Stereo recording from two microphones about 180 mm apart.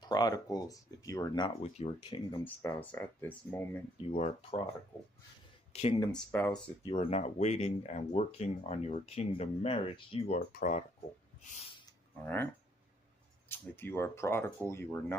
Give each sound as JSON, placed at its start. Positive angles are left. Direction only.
{"t": 0.0, "sound": "speech", "side_deg": 20}
{"t": 1.7, "sound": "speech", "side_deg": 35}
{"t": 2.4, "sound": "speech", "side_deg": 10}
{"t": 4.0, "sound": "speech", "side_deg": 35}
{"t": 5.7, "sound": "speech", "side_deg": 35}
{"t": 5.9, "sound": "speech", "side_deg": 5}
{"t": 6.8, "sound": "speech", "side_deg": 30}
{"t": 10.5, "sound": "speech", "side_deg": 45}
{"t": 13.5, "sound": "speech", "side_deg": 10}